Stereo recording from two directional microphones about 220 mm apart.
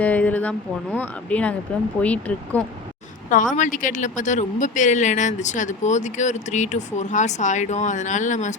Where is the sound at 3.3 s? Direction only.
35° left (ahead or behind).